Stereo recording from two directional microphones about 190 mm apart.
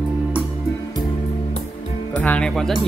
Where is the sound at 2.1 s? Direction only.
5° left (ahead or behind).